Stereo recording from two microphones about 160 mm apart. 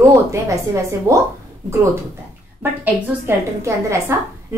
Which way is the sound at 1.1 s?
20° right (ahead or behind).